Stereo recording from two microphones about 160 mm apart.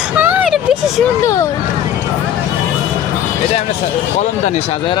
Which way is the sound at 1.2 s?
20° left (ahead or behind).